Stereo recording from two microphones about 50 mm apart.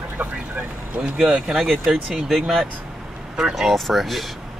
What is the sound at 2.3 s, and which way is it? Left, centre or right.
Speech, centre.